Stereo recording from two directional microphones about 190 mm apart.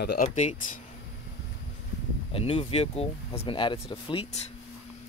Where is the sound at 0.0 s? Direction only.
55° left (ahead or behind).